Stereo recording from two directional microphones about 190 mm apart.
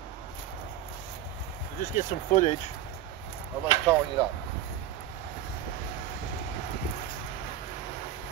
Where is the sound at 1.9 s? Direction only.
35° left (ahead or behind).